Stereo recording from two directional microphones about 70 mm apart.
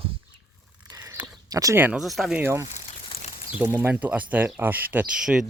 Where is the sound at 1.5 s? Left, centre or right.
Right.